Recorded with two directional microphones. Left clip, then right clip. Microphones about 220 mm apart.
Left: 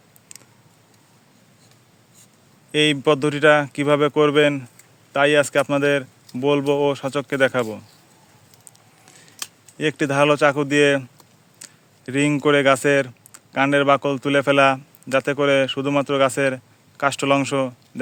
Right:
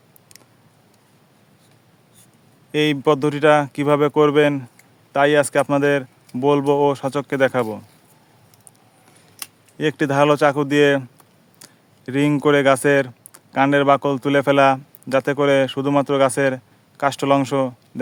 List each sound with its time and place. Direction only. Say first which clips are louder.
2.7 s speech: even; 10° right (ahead or behind)
9.7 s speech: right 1 dB; 15° right (ahead or behind)